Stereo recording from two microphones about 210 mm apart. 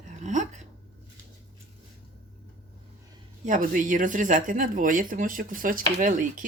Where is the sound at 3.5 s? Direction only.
40° right (ahead or behind).